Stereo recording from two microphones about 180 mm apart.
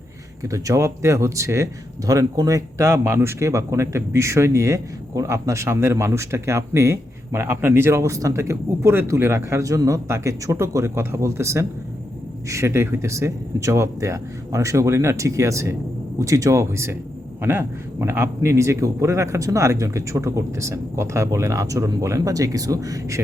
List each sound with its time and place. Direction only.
0.4 s speech: 20° right (ahead or behind)